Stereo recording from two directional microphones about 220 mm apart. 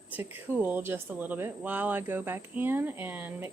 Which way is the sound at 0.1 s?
10° right (ahead or behind).